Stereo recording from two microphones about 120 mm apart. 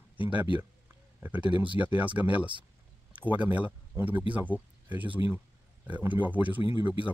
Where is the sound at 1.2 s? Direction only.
15° right (ahead or behind).